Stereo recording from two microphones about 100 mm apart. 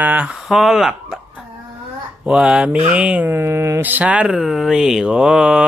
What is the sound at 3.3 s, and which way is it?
Mantra, 25° right (ahead or behind).